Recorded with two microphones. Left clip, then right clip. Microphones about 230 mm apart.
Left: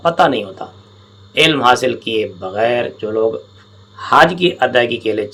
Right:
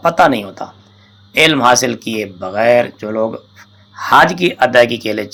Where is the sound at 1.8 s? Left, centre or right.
Centre.